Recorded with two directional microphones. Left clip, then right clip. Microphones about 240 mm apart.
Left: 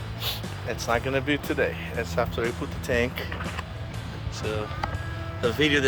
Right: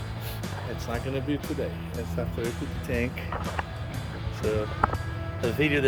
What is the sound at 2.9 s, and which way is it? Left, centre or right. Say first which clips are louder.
Speech: left 5 dB; left.